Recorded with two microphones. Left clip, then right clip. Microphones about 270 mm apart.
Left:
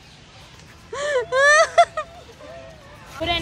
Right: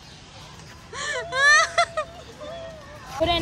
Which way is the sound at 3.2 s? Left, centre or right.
Right.